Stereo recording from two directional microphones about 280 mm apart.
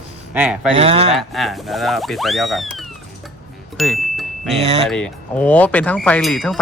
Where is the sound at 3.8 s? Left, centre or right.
Centre.